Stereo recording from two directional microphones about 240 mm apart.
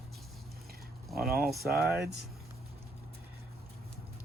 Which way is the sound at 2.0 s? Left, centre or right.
Right.